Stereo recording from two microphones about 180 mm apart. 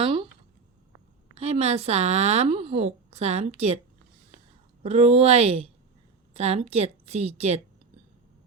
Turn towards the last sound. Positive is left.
turn(degrees=-35)  # may be behind; listen again after turning